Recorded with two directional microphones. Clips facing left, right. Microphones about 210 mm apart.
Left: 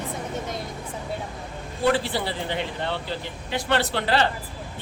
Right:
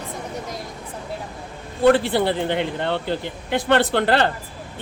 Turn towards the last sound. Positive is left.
turn(degrees=-55)  # may be behind; listen again after turning